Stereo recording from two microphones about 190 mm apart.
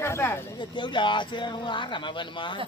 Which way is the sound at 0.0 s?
15° left (ahead or behind).